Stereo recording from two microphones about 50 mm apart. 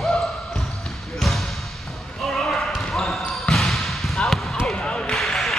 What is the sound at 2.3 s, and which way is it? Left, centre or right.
Basketball bounce, centre.